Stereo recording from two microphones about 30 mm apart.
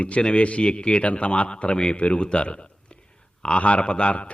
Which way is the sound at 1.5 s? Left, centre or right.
Left.